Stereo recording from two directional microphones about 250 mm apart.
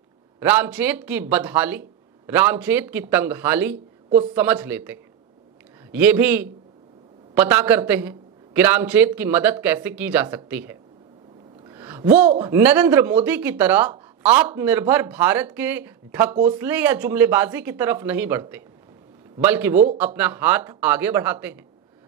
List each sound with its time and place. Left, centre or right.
0.4 s speech: centre